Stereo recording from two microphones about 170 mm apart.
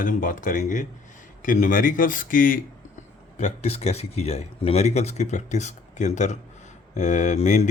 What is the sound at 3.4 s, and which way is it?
Speech, 40° left (ahead or behind).